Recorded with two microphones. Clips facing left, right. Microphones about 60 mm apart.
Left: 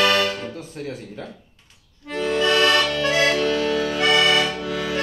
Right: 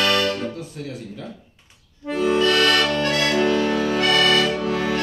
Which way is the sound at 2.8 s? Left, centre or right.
Right.